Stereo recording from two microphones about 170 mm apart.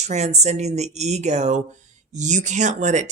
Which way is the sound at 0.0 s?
40° right (ahead or behind).